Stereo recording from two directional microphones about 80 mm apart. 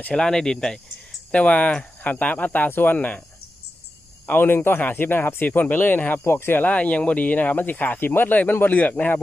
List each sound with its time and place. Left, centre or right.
0.0 s speech: centre
4.3 s speech: left